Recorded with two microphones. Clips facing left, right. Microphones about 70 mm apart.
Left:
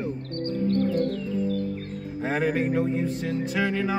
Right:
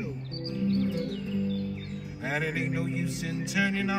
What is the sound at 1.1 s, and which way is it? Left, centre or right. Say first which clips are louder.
Music: left 4 dB; left.